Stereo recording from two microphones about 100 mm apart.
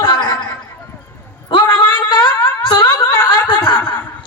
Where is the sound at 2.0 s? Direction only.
50° left (ahead or behind).